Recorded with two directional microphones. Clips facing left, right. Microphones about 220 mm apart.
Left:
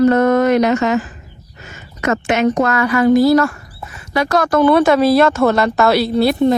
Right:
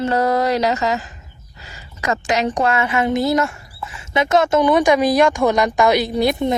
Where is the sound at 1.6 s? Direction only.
35° right (ahead or behind).